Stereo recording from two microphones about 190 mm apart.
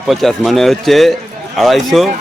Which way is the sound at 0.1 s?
Centre (ahead or behind).